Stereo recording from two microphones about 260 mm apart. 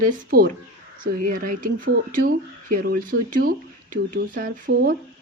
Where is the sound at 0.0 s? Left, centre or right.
Right.